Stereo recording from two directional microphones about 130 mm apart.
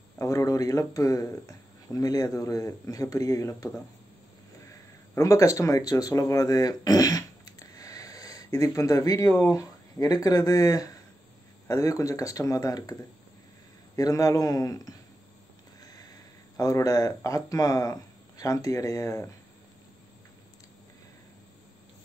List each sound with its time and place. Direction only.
0.2 s speech: 25° left (ahead or behind)
13.9 s speech: 25° left (ahead or behind)
15.8 s sniff: 30° left (ahead or behind)
16.5 s speech: 25° left (ahead or behind)